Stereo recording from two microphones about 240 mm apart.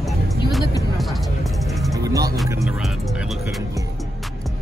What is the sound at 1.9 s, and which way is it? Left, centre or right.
Speech, centre.